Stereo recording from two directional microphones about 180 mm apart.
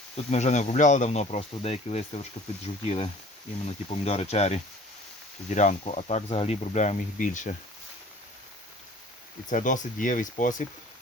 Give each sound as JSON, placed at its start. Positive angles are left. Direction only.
{"t": 0.3, "sound": "speech", "side_deg": 40}
{"t": 9.5, "sound": "speech", "side_deg": 45}